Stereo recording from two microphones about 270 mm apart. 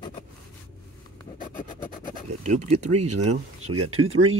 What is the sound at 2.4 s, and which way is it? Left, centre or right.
Speech, right.